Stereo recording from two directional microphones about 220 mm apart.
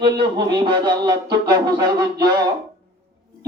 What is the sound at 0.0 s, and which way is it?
Speech, 20° right (ahead or behind).